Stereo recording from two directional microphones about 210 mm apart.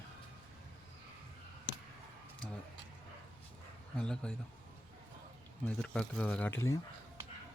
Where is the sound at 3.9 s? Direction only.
5° left (ahead or behind).